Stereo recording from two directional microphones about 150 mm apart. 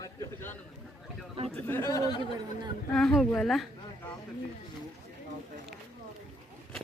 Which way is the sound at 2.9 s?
5° left (ahead or behind).